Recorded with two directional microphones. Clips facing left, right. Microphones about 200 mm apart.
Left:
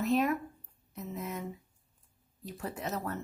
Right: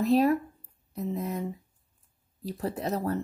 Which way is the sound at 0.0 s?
35° right (ahead or behind).